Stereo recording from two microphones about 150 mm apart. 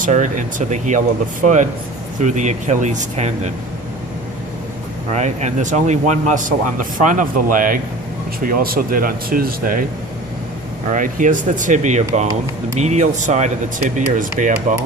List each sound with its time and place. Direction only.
0.0 s speech: 60° right (ahead or behind)
5.1 s speech: 50° right (ahead or behind); by 9.8 s 70° right (ahead or behind)
10.9 s speech: 60° right (ahead or behind)